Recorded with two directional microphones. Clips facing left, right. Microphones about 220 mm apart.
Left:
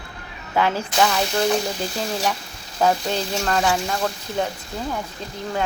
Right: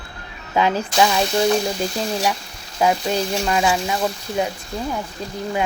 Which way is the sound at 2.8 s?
10° right (ahead or behind).